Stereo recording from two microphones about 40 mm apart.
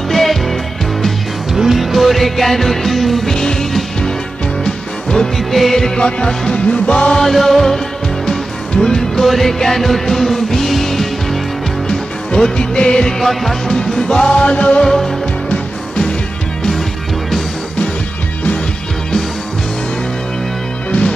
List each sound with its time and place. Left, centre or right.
0.1 s music: centre
1.5 s music: centre
5.1 s music: centre
7.1 s music: centre
12.5 s music: centre
13.2 s music: centre
13.7 s music: centre
14.3 s music: left
14.8 s music: centre